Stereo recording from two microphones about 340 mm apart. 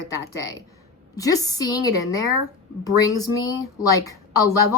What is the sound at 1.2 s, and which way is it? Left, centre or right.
A woman's voice, centre.